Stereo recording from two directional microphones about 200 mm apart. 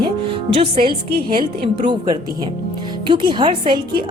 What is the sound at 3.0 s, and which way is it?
A woman's voice, 25° right (ahead or behind).